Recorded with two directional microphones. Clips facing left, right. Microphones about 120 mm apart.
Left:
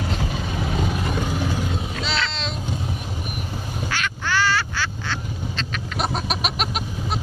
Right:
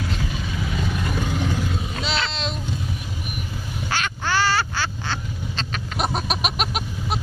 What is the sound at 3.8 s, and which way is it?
Quack, 30° right (ahead or behind).